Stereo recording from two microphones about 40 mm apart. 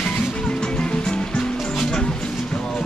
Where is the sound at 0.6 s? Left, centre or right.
Left.